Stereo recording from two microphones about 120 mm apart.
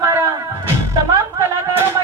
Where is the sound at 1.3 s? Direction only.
20° right (ahead or behind).